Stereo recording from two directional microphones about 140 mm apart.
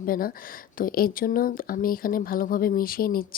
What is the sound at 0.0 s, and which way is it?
Speech, 90° left.